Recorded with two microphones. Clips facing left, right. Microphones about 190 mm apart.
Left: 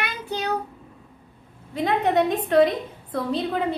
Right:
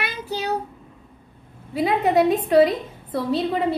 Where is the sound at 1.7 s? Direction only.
5° right (ahead or behind).